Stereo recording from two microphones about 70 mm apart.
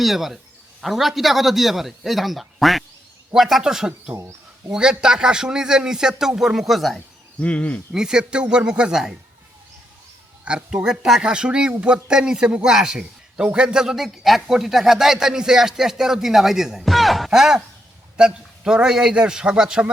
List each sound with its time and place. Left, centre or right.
0.0 s a man's voice: centre
4.1 s speech: right
4.7 s speech: centre
7.4 s speech: centre
7.9 s speech: centre
10.4 s speech: centre